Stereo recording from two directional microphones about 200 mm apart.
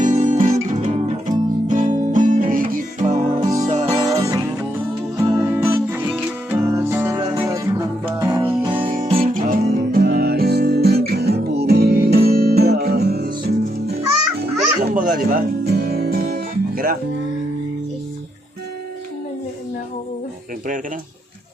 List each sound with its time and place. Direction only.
0.0 s music: 40° right (ahead or behind)
3.9 s music: 15° right (ahead or behind)
8.8 s music: 30° right (ahead or behind)
9.5 s music: 45° right (ahead or behind)
15.3 s music: 45° right (ahead or behind)